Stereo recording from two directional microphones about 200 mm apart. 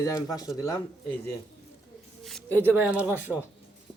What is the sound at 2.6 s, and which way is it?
Speech, 5° right (ahead or behind).